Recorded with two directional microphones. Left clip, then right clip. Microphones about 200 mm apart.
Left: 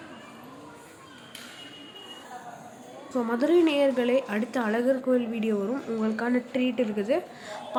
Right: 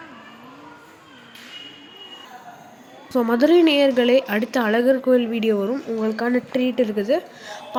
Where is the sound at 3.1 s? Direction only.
25° right (ahead or behind).